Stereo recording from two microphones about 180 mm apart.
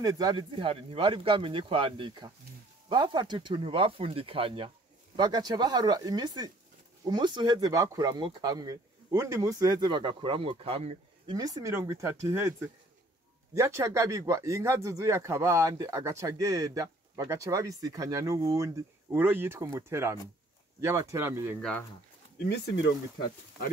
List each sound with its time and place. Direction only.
0.0 s speech: 20° right (ahead or behind)
11.3 s speech: 20° right (ahead or behind)
21.5 s speech: 5° left (ahead or behind)
22.4 s speech: 60° left (ahead or behind)